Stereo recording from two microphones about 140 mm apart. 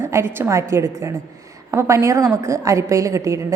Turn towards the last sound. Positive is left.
turn(degrees=-20)  # may be behind; listen again after turning